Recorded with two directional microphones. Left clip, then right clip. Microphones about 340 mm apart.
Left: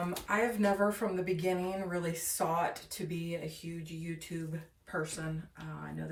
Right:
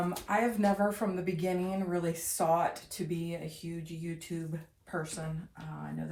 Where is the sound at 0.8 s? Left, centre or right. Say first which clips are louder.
Even; centre.